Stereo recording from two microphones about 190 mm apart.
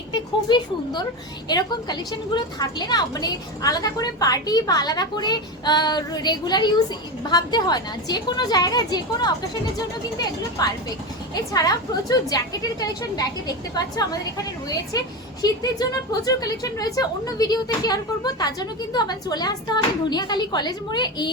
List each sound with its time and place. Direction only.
0.1 s a woman's voice: 25° left (ahead or behind)
10.6 s a woman's voice: 20° left (ahead or behind)